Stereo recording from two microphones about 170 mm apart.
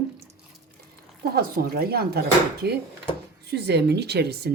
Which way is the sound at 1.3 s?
65° right (ahead or behind).